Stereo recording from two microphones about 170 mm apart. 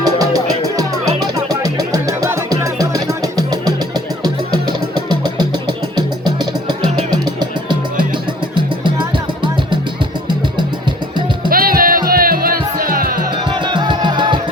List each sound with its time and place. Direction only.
0.0 s music: 20° right (ahead or behind)
11.4 s music: 60° right (ahead or behind)
13.5 s music: 25° right (ahead or behind)